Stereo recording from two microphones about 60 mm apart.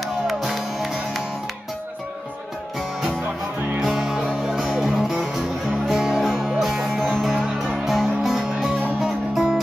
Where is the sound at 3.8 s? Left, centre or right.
Centre.